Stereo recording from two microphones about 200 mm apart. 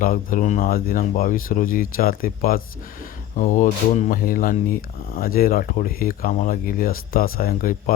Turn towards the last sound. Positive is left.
turn(degrees=45)  # may be behind; listen again after turning